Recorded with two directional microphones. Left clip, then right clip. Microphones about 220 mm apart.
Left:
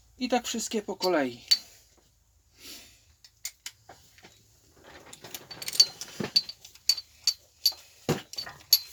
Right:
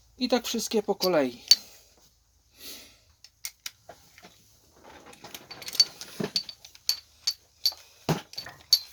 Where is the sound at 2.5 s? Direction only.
40° right (ahead or behind).